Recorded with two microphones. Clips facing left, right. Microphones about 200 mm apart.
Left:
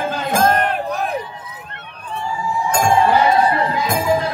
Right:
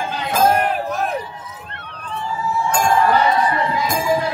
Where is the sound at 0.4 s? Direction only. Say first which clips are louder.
Right 1 dB; 10° right (ahead or behind).